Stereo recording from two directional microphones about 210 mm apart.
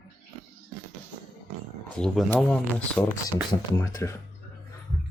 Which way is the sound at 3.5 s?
15° left (ahead or behind).